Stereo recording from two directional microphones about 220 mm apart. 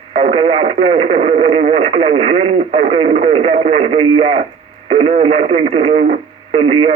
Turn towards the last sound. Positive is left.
turn(degrees=-25)  # may be behind; listen again after turning